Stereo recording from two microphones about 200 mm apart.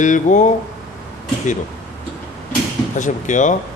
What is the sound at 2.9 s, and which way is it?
Speech, 40° left (ahead or behind).